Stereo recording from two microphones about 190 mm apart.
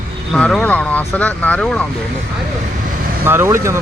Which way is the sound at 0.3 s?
5° left (ahead or behind).